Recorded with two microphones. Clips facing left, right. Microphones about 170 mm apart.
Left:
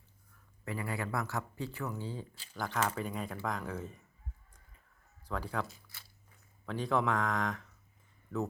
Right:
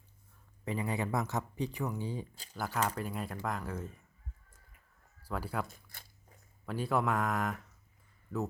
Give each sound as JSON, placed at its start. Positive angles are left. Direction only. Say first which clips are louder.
{"t": 0.6, "sound": "speech", "louder": "right 3 dB", "side_deg": -20}
{"t": 2.3, "sound": "speech", "louder": "right 3 dB", "side_deg": -40}
{"t": 2.6, "sound": "speech", "louder": "even", "side_deg": -10}
{"t": 5.2, "sound": "speech", "louder": "even", "side_deg": -5}
{"t": 5.6, "sound": "speech", "louder": "left 1 dB", "side_deg": -50}
{"t": 6.7, "sound": "speech", "louder": "even", "side_deg": -5}